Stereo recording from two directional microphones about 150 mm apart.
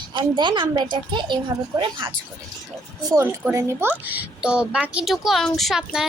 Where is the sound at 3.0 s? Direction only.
20° right (ahead or behind).